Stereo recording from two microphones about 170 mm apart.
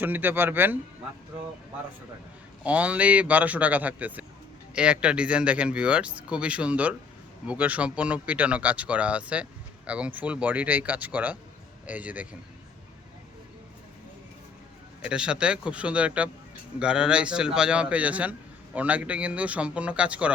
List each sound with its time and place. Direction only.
0.0 s speech: 10° right (ahead or behind)
2.6 s speech: 10° right (ahead or behind)
15.0 s speech: 5° right (ahead or behind)